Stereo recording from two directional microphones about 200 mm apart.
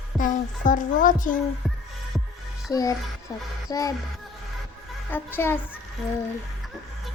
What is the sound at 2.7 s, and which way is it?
Speech, 15° left (ahead or behind).